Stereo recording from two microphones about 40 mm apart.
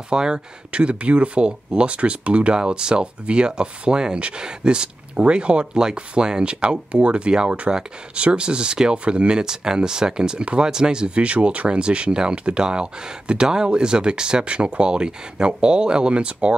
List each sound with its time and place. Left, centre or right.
0.1 s speech: right